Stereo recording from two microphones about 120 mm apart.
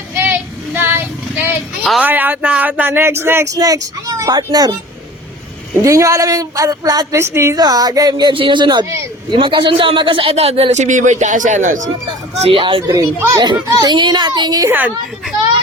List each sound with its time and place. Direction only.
0.2 s child singing: 15° right (ahead or behind)
1.8 s speech: 5° right (ahead or behind); by 4.7 s 30° right (ahead or behind)
5.8 s a child's voice: 25° right (ahead or behind)
8.3 s a child's voice: 45° right (ahead or behind); by 11.8 s 90° right
12.4 s speech: 50° right (ahead or behind)
12.9 s a child's voice: 30° right (ahead or behind)
14.7 s speech: 15° right (ahead or behind)